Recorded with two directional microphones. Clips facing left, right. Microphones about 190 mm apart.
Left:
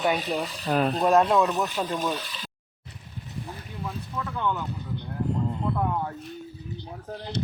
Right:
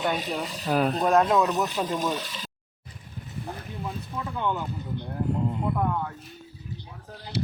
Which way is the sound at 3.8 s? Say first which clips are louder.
Left 1 dB; 15° right (ahead or behind).